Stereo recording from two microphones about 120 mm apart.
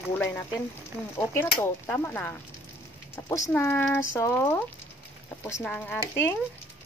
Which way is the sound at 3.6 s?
20° left (ahead or behind).